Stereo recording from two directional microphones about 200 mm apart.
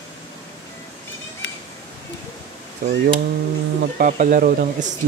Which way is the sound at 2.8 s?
45° right (ahead or behind).